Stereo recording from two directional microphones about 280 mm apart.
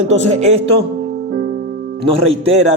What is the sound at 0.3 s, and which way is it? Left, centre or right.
Speech, right.